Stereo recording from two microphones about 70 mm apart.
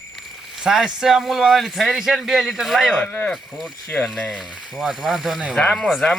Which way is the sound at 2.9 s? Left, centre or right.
Left.